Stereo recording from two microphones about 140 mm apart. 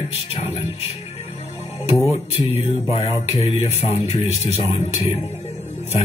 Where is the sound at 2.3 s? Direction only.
45° left (ahead or behind).